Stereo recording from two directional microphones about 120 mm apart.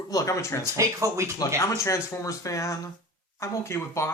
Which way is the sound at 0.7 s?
25° right (ahead or behind).